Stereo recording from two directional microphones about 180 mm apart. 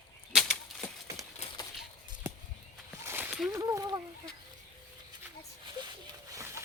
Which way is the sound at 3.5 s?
20° right (ahead or behind).